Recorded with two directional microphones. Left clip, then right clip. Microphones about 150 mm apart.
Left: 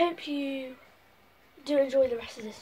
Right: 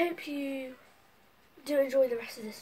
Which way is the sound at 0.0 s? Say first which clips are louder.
Left 4 dB; 25° right (ahead or behind).